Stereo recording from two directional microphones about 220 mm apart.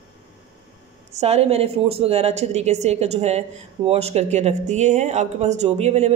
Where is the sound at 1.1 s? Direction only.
30° right (ahead or behind).